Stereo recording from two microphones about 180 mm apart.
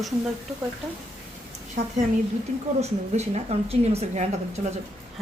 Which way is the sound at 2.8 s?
35° right (ahead or behind).